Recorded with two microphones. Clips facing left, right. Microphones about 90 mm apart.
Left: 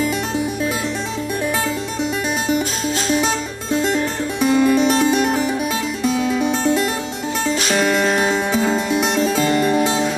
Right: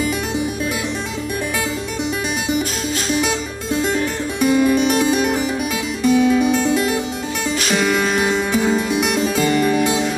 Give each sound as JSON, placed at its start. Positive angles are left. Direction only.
{"t": 4.4, "sound": "music", "side_deg": -5}
{"t": 7.7, "sound": "music", "side_deg": 0}
{"t": 9.8, "sound": "music", "side_deg": 40}